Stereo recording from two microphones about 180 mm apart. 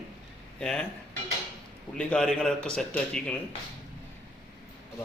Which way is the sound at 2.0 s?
5° left (ahead or behind).